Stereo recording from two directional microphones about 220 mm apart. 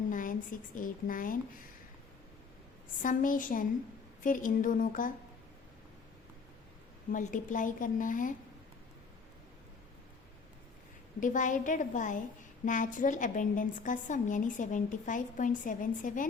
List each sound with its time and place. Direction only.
0.1 s speech: 35° left (ahead or behind)
3.0 s a woman's voice: 35° left (ahead or behind)
7.1 s a woman's voice: 35° left (ahead or behind)
11.2 s a woman's voice: 35° left (ahead or behind)